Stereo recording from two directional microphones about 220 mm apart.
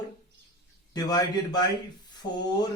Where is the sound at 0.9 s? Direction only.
20° left (ahead or behind).